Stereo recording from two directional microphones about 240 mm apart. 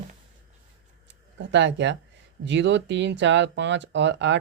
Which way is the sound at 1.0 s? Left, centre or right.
Right.